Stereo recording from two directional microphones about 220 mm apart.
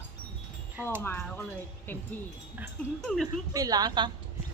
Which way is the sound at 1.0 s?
10° left (ahead or behind).